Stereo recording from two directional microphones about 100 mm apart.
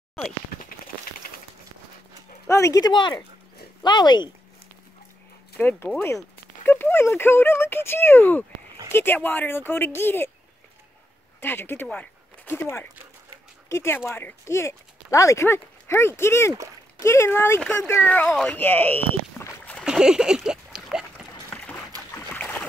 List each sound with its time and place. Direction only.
2.4 s speech: 30° left (ahead or behind)
2.8 s speech: 50° left (ahead or behind)
5.6 s speech: 15° left (ahead or behind)
11.4 s speech: 20° left (ahead or behind)
11.9 s zipper: 15° left (ahead or behind)
13.7 s speech: 25° left (ahead or behind)
19.8 s splash: 5° right (ahead or behind)
21.5 s boat: 10° left (ahead or behind)